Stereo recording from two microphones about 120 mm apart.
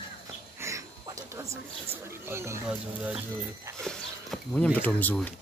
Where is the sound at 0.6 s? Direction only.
25° right (ahead or behind).